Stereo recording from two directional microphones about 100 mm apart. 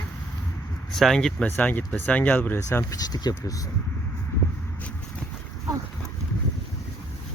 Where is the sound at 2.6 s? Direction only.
35° left (ahead or behind).